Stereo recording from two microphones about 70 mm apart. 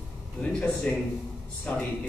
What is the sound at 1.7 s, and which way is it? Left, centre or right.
Speech, centre.